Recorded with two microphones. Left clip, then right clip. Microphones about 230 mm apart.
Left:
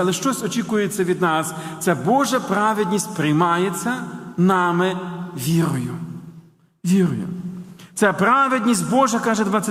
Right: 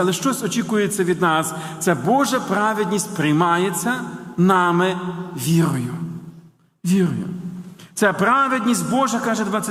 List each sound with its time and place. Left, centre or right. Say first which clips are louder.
0.0 s a man's voice: right 1 dB; centre; by 9.6 s left